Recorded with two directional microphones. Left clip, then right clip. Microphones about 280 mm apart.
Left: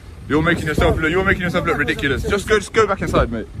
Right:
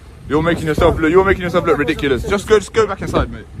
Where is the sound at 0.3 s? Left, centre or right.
Centre.